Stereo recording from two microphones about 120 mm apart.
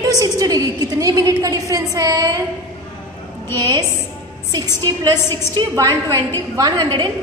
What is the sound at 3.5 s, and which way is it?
A woman's voice, 35° right (ahead or behind).